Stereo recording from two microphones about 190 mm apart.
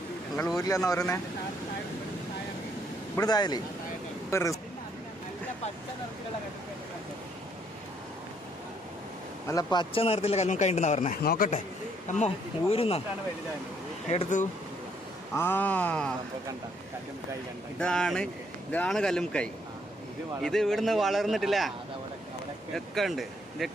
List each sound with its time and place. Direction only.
0.7 s speech: 15° left (ahead or behind)
3.2 s speech: 20° left (ahead or behind)
9.5 s speech: 20° left (ahead or behind); by 11.2 s 35° left (ahead or behind)
11.2 s speech: 50° left (ahead or behind); by 13.0 s 30° left (ahead or behind)
14.1 s speech: 40° left (ahead or behind)
15.4 s speech: 10° left (ahead or behind)
17.7 s a man's voice: 5° left (ahead or behind)
22.7 s speech: centre (ahead or behind)